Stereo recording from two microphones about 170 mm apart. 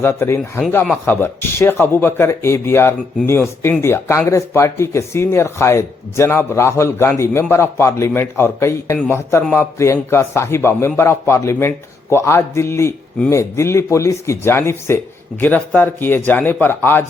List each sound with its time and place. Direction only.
0.0 s speech: 15° left (ahead or behind)